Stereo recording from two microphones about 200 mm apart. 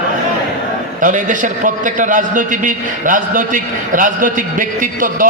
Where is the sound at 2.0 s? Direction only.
40° right (ahead or behind).